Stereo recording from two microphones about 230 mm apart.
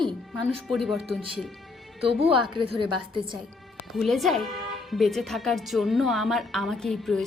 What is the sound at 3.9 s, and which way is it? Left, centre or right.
A woman's voice, centre.